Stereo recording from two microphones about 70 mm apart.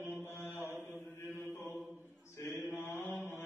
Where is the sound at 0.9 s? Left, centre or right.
Left.